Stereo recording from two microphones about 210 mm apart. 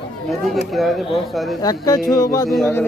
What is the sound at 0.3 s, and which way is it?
A man's voice, centre (ahead or behind).